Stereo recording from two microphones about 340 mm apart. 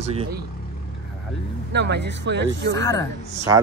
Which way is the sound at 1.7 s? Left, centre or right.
Right.